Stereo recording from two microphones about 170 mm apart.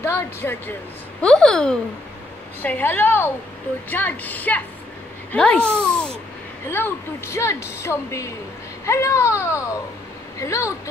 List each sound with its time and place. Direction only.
0.0 s speech: 15° left (ahead or behind)